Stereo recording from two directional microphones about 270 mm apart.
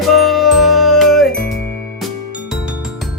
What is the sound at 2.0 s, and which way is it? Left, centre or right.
Music, centre.